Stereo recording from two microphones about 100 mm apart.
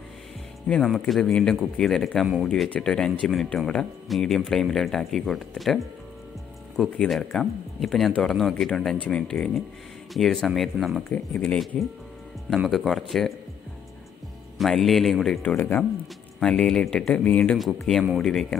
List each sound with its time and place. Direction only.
0.8 s speech: centre (ahead or behind)
7.1 s speech: 5° left (ahead or behind)
11.3 s speech: 15° left (ahead or behind)
12.5 s speech: 5° right (ahead or behind)
14.6 s speech: 5° left (ahead or behind)
15.4 s speech: 20° left (ahead or behind)
16.3 s speech: 5° left (ahead or behind)
17.6 s speech: centre (ahead or behind)